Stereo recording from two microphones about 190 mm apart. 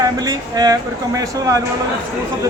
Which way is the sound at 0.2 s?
20° right (ahead or behind).